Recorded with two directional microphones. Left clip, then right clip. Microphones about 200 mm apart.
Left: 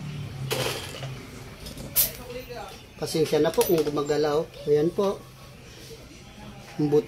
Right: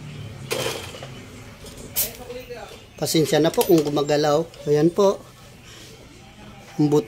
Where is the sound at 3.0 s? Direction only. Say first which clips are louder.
Right 4 dB; 55° right (ahead or behind).